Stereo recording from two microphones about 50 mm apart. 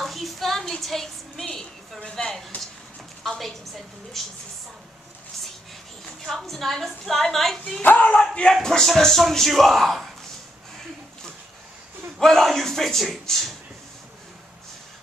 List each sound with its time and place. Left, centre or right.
0.0 s a sound: centre
1.4 s a sound: centre
3.3 s a woman's voice: centre
6.2 s a woman's voice: centre
7.8 s speech: left
8.6 s a woman's voice: centre
12.2 s a woman's voice: centre